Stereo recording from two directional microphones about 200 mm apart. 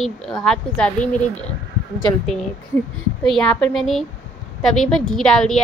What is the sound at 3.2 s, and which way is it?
A woman's voice, 5° left (ahead or behind).